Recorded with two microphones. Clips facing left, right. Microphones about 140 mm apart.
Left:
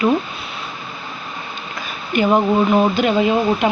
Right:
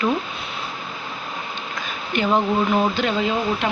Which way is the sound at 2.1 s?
15° left (ahead or behind).